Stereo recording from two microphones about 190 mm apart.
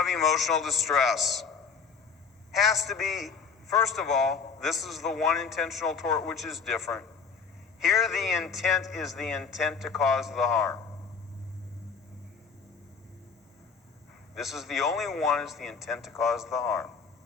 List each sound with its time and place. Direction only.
0.0 s a man's voice: centre (ahead or behind)
2.5 s a man's voice: centre (ahead or behind)
14.3 s a man's voice: centre (ahead or behind)